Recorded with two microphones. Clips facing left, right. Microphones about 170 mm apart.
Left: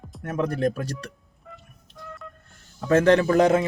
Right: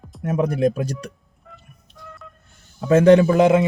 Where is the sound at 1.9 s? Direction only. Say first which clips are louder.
Left 2 dB; centre (ahead or behind).